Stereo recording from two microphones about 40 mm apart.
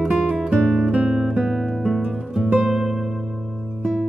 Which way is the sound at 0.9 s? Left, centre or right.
Right.